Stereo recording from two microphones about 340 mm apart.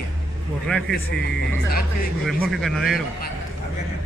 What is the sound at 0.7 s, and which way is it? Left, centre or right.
Speech, centre.